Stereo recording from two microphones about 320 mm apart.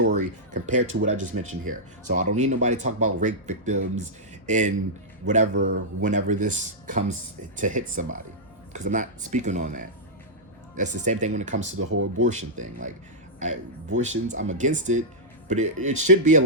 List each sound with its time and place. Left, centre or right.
0.0 s a sound: right
1.0 s speech: right
11.8 s speech: right
12.2 s speech: right